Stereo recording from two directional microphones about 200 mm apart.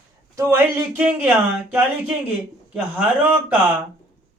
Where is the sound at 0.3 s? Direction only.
10° right (ahead or behind).